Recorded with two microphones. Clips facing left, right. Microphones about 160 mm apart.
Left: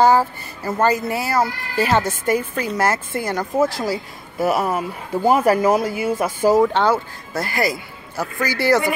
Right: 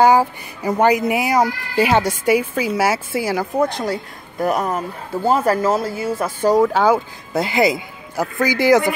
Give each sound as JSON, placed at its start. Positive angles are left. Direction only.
{"t": 0.0, "sound": "speech", "side_deg": -15}
{"t": 3.5, "sound": "speech", "side_deg": 5}
{"t": 6.7, "sound": "speech", "side_deg": -10}
{"t": 7.3, "sound": "speech", "side_deg": -20}